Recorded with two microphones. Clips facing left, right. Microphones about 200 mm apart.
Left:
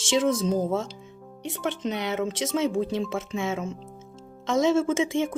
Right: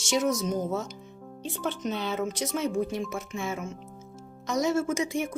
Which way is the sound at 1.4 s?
75° left (ahead or behind).